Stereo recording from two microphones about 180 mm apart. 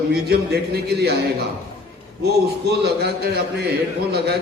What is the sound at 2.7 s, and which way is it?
Speech, 65° right (ahead or behind).